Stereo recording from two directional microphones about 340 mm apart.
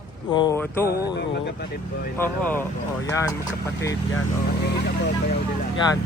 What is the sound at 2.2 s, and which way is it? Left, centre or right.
Speech, centre.